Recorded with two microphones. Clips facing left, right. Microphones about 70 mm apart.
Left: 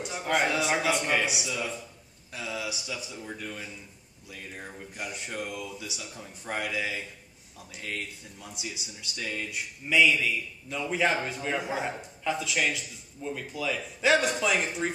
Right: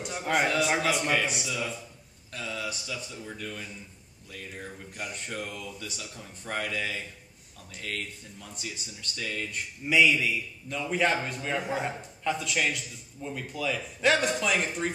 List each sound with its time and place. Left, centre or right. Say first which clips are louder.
0.0 s a man's voice: even; centre
9.8 s a man's voice: even; centre